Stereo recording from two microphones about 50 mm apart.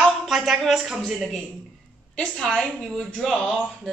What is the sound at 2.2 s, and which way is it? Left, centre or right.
A woman's voice, centre.